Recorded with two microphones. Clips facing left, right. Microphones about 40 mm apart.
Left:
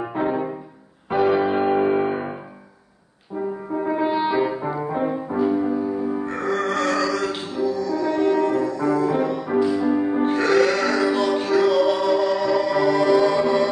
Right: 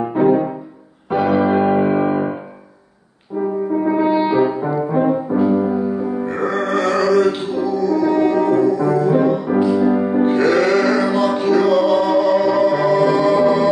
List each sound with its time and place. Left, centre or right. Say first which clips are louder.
0.1 s music: right 10 dB; centre
2.0 s piano: right 6 dB; centre
3.8 s music: right 4 dB; centre
4.9 s french horn: right 8 dB; centre
6.1 s music: right 4 dB; centre
9.6 s music: right 3 dB; right
10.0 s music: right 5 dB; centre